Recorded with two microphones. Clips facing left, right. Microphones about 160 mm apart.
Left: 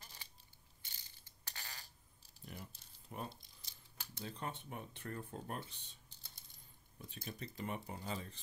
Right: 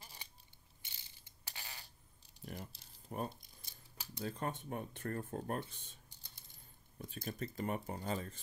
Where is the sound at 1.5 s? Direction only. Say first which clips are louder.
Right 1 dB; 10° right (ahead or behind).